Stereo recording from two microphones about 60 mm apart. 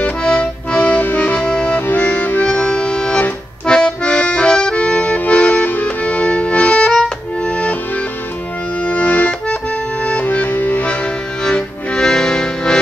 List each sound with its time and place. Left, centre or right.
0.2 s accordion: centre
1.8 s music: left
2.5 s accordion: centre
8.8 s accordion: left
11.4 s music: centre